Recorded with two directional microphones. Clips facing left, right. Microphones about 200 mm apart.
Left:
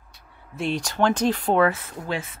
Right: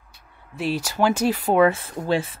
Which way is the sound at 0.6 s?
5° right (ahead or behind).